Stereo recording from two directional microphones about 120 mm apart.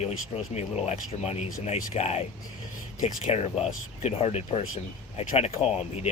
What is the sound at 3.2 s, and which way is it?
Speech, 60° left (ahead or behind).